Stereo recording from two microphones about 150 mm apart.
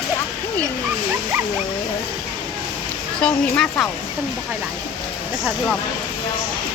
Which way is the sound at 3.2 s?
5° left (ahead or behind).